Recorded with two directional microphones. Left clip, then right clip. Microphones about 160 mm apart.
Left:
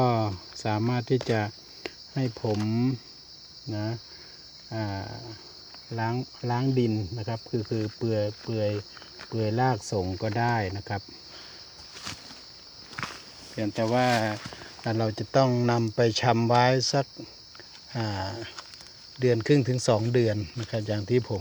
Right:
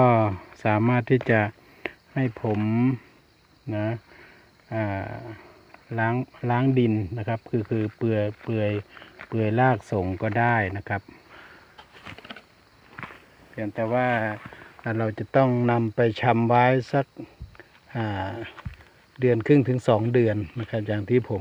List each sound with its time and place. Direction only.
0.0 s cricket: 30° right (ahead or behind)
3.7 s speech: 30° right (ahead or behind)
5.9 s cricket: 35° right (ahead or behind)
13.6 s speech: 10° left (ahead or behind)
14.8 s speech: 5° right (ahead or behind)
17.9 s speech: 15° right (ahead or behind)